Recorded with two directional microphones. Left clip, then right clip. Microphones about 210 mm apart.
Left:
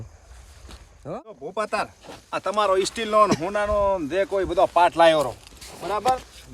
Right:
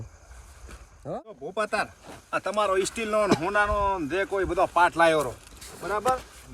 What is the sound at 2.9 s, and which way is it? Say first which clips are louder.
Speech: left 5 dB; 45° left (ahead or behind).